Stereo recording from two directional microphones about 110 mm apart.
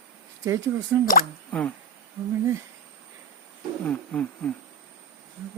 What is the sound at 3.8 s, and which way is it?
Speech, 10° left (ahead or behind).